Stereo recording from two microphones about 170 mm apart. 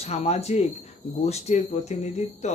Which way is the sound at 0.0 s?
40° left (ahead or behind).